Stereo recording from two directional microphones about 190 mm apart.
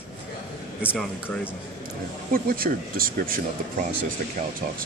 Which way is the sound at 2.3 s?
50° right (ahead or behind).